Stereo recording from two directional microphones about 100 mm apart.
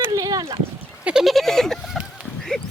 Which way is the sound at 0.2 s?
40° right (ahead or behind).